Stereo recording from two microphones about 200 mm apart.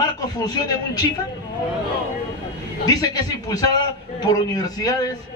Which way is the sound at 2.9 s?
20° left (ahead or behind).